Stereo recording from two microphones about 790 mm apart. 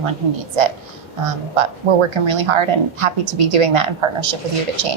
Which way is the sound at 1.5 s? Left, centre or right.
Right.